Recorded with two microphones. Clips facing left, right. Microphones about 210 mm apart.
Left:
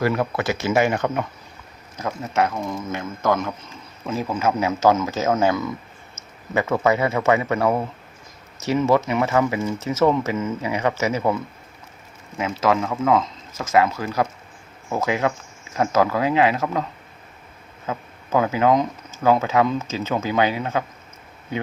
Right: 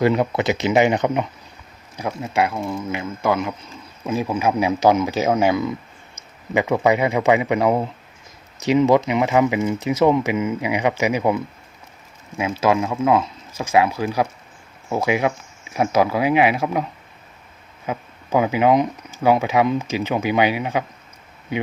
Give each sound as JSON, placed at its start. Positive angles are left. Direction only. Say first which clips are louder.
{"t": 0.0, "sound": "speech", "louder": "right 4 dB", "side_deg": -20}
{"t": 12.4, "sound": "speech", "louder": "right 2 dB", "side_deg": -10}
{"t": 17.8, "sound": "speech", "louder": "right 2 dB", "side_deg": -15}